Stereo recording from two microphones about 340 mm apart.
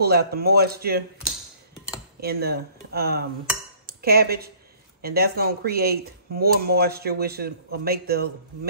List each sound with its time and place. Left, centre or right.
0.0 s speech: right
2.1 s speech: right